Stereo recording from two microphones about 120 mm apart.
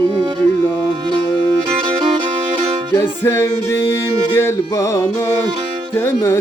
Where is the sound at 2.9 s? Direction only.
20° left (ahead or behind).